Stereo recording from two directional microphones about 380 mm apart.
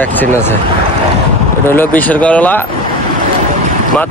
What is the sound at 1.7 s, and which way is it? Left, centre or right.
Speech, centre.